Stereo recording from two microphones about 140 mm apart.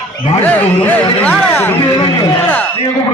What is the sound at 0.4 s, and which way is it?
Speech, 10° left (ahead or behind).